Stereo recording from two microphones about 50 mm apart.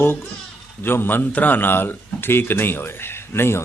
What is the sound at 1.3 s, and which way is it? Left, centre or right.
Speech, left.